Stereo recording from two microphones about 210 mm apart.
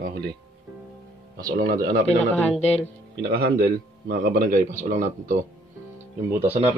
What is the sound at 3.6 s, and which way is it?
Speech, 45° right (ahead or behind).